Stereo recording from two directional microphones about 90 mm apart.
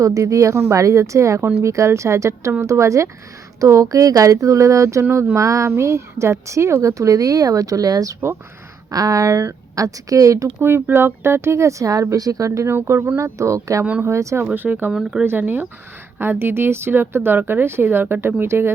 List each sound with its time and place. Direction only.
0.0 s a woman's voice: 35° right (ahead or behind)
14.5 s a woman's voice: 20° right (ahead or behind)